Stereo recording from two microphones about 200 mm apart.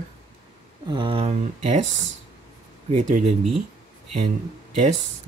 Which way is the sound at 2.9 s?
40° right (ahead or behind).